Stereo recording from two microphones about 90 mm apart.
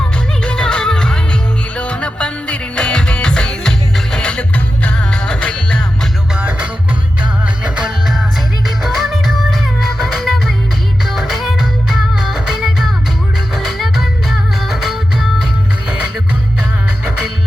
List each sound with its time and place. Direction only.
0.4 s music: 10° left (ahead or behind)
6.3 s music: 15° right (ahead or behind)
11.0 s music: 5° right (ahead or behind)